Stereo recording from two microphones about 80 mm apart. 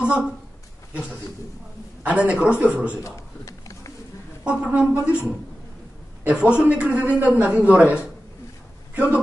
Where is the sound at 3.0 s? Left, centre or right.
Left.